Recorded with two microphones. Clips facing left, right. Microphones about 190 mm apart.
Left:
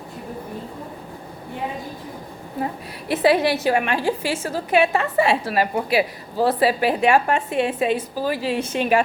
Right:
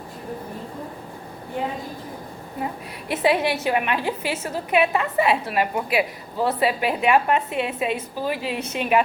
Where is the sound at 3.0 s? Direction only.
35° left (ahead or behind).